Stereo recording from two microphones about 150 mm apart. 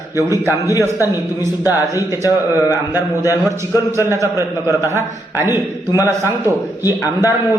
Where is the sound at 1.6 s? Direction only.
25° left (ahead or behind).